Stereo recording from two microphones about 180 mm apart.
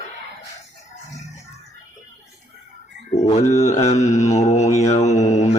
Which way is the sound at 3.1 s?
35° left (ahead or behind).